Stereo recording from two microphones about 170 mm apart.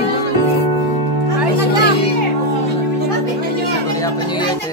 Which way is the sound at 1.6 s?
75° left (ahead or behind).